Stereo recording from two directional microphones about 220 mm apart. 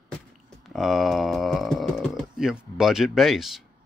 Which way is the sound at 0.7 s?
Centre (ahead or behind).